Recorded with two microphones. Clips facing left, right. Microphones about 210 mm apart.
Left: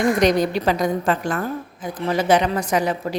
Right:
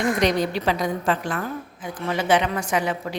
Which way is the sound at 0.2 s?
45° left (ahead or behind).